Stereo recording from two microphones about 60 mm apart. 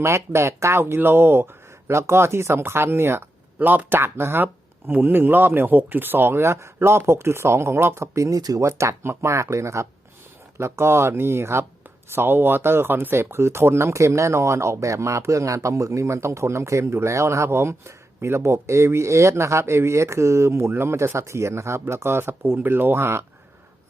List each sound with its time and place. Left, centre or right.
0.0 s speech: right
1.9 s speech: right
6.4 s speech: right
8.6 s speech: right